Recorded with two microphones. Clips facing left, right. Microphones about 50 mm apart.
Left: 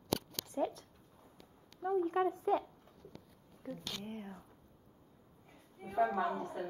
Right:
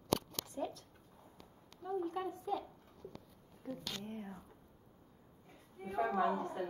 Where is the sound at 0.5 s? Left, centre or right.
Left.